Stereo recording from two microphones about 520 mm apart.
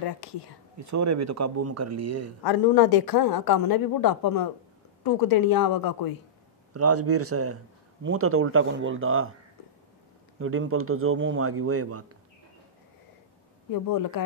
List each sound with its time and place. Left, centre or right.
0.2 s speech: left
0.7 s speech: right
2.4 s a woman's voice: left
6.7 s speech: right
10.4 s speech: right
13.7 s a woman's voice: left